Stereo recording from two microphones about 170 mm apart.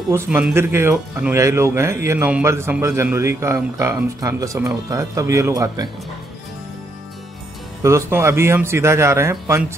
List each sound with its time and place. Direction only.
0.1 s speech: 10° right (ahead or behind)
7.8 s speech: 15° right (ahead or behind)